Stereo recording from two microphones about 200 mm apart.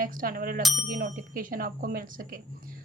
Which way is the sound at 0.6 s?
Centre (ahead or behind).